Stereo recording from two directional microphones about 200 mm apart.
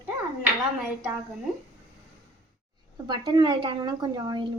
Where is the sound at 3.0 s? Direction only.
20° right (ahead or behind).